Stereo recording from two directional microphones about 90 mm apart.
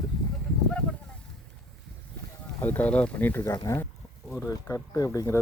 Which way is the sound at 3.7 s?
35° left (ahead or behind).